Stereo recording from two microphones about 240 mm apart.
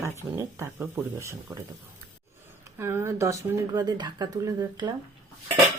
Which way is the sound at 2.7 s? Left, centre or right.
Centre.